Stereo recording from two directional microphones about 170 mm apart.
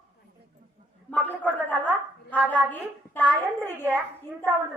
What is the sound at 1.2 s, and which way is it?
Speech, 10° left (ahead or behind).